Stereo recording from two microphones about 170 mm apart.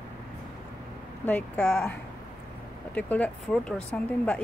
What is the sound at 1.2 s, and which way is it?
Speech, 10° left (ahead or behind).